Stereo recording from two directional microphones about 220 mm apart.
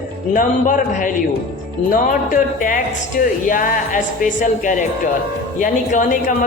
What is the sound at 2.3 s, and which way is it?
A man's voice, 40° left (ahead or behind).